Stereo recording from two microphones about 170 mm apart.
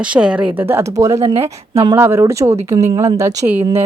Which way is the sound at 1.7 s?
30° right (ahead or behind).